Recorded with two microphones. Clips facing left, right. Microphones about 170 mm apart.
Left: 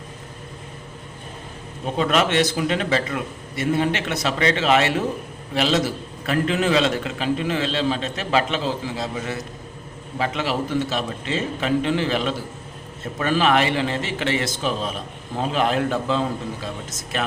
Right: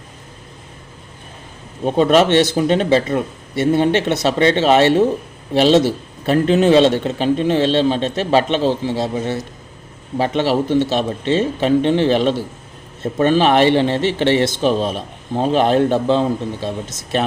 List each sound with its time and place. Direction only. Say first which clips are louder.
1.8 s speech: right 8 dB; 30° right (ahead or behind)